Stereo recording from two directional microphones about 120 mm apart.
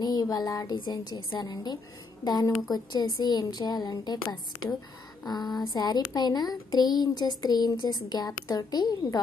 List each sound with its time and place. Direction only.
0.0 s speech: 35° left (ahead or behind)
5.2 s a sound: 35° left (ahead or behind)
5.7 s speech: 35° left (ahead or behind)